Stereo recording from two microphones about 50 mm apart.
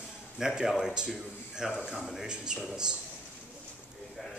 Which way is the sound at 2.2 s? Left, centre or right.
Centre.